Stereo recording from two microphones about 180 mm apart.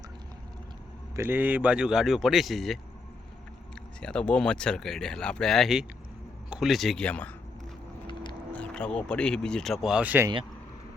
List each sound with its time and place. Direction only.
1.1 s speech: 10° right (ahead or behind)
4.0 s speech: 5° left (ahead or behind)
8.0 s vehicle: 25° left (ahead or behind)
8.7 s speech: 5° left (ahead or behind)